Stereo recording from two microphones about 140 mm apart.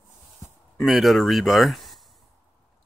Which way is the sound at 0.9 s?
Centre (ahead or behind).